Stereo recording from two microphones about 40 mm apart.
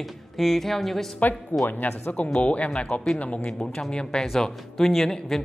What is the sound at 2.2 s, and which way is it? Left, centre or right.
Speech, left.